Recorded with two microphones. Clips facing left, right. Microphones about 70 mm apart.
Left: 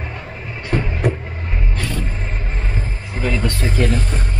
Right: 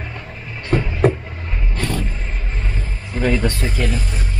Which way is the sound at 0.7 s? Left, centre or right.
Centre.